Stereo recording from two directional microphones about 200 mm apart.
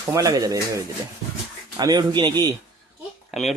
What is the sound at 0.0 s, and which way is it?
Speech, 15° right (ahead or behind).